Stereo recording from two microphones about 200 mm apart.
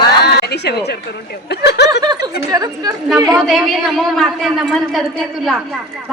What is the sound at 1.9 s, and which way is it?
A woman's voice, 20° right (ahead or behind).